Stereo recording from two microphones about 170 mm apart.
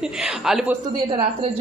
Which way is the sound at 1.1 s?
30° right (ahead or behind).